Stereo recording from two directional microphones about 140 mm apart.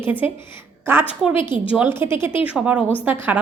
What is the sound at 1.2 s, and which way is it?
A woman's voice, 5° right (ahead or behind).